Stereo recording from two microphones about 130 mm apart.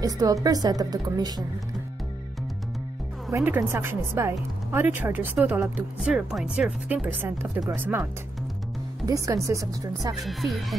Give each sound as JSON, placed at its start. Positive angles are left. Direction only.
{"t": 0.0, "sound": "a woman's voice", "side_deg": -25}
{"t": 3.3, "sound": "a woman's voice", "side_deg": -20}
{"t": 5.9, "sound": "a woman's voice", "side_deg": 0}
{"t": 9.0, "sound": "a woman's voice", "side_deg": -25}
{"t": 10.2, "sound": "speech", "side_deg": 0}